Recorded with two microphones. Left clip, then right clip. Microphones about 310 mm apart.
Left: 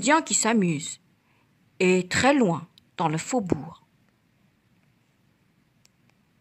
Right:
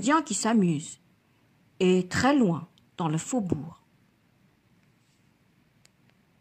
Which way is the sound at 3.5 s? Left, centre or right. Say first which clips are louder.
Left 4 dB; left.